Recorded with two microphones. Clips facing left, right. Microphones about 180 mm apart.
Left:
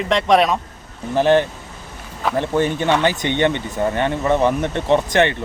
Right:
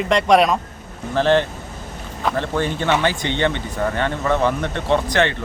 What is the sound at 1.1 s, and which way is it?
Speech, 15° left (ahead or behind).